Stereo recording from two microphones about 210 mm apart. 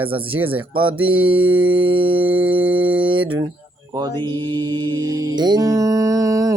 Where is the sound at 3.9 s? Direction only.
20° right (ahead or behind).